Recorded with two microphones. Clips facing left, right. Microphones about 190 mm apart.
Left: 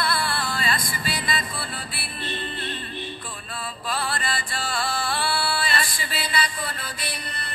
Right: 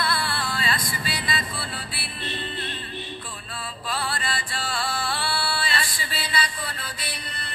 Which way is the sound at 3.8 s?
45° left (ahead or behind).